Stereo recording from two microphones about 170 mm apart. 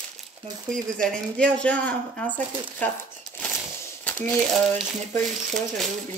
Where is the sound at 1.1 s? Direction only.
5° left (ahead or behind).